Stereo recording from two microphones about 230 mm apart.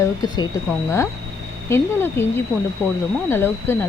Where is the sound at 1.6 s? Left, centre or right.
Centre.